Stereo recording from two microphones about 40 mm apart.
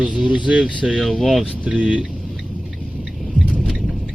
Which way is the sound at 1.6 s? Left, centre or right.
Right.